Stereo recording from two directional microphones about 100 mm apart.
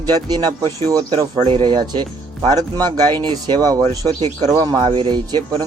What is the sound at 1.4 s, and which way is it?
Speech, 65° right (ahead or behind).